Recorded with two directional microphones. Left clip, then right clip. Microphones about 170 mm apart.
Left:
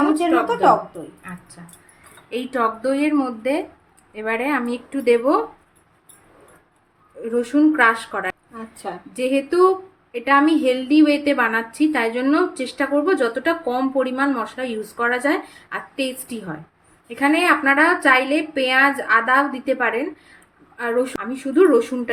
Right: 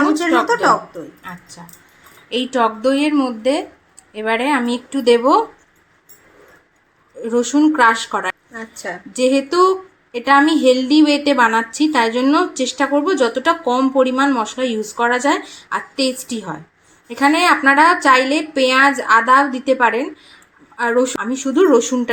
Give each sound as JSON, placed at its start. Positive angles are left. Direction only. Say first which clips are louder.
{"t": 0.1, "sound": "speech", "louder": "right 3 dB", "side_deg": 0}
{"t": 2.3, "sound": "a woman's voice", "louder": "right 4 dB", "side_deg": -25}
{"t": 7.3, "sound": "a woman's voice", "louder": "right 3 dB", "side_deg": -20}